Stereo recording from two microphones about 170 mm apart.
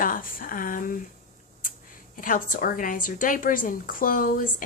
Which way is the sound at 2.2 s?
55° left (ahead or behind).